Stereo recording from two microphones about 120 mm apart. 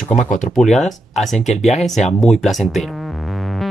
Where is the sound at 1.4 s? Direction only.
70° left (ahead or behind).